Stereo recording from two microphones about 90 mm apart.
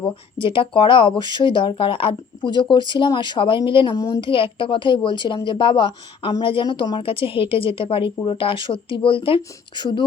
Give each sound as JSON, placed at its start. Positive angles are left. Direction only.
{"t": 0.3, "sound": "a woman's voice", "side_deg": 70}
{"t": 3.9, "sound": "speech", "side_deg": 40}
{"t": 4.2, "sound": "a woman's voice", "side_deg": 75}
{"t": 7.0, "sound": "a woman's voice", "side_deg": 85}